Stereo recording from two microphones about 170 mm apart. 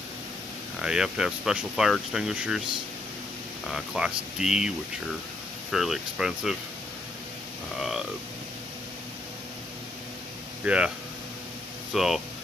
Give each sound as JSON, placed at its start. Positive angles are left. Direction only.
{"t": 0.7, "sound": "speech", "side_deg": -5}
{"t": 3.6, "sound": "speech", "side_deg": -5}
{"t": 10.6, "sound": "speech", "side_deg": -5}
{"t": 11.9, "sound": "speech", "side_deg": 0}